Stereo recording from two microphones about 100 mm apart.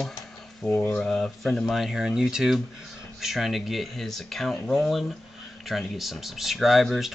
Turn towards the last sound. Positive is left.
turn(degrees=0)  # may be behind; listen again after turning